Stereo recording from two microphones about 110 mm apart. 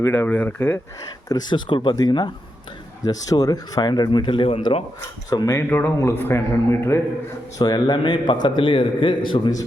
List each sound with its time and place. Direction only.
0.0 s speech: 20° left (ahead or behind)
1.3 s a man's voice: 45° left (ahead or behind)
5.5 s speech: 20° left (ahead or behind)
7.6 s a man's voice: 40° left (ahead or behind)